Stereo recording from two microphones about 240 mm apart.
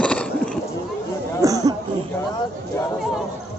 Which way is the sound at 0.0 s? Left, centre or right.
Centre.